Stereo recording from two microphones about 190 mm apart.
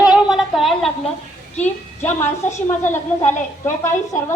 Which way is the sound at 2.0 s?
10° left (ahead or behind).